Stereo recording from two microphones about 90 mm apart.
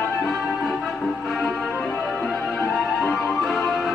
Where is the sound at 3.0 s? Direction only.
Centre (ahead or behind).